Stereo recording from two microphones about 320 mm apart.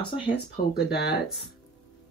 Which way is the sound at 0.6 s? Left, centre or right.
Left.